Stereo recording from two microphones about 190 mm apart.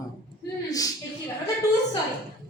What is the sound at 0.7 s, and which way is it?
Speech, 20° left (ahead or behind).